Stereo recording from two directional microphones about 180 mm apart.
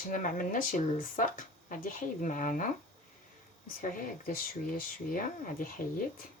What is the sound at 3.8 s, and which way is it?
Speech, 50° left (ahead or behind).